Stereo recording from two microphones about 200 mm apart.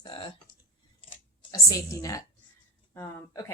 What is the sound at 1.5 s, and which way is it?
Speech, 15° left (ahead or behind).